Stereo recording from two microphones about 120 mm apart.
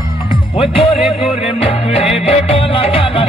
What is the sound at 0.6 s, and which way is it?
Music, 50° left (ahead or behind).